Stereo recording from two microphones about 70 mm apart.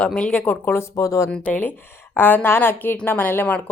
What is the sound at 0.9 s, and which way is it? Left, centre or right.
Speech, left.